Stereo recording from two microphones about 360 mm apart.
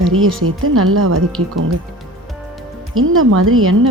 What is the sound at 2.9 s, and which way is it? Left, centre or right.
Speech, right.